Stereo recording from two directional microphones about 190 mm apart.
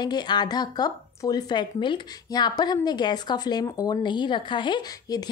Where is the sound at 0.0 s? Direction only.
20° left (ahead or behind).